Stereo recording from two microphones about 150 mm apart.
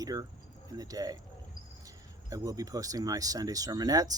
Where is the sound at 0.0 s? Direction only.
25° right (ahead or behind).